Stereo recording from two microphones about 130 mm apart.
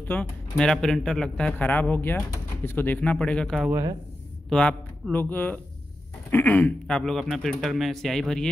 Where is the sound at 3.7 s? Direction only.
25° right (ahead or behind).